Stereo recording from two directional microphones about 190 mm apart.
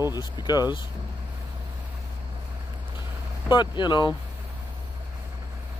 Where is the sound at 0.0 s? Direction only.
20° left (ahead or behind).